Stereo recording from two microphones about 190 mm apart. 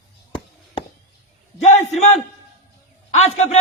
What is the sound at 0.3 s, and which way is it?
Chop, 30° left (ahead or behind).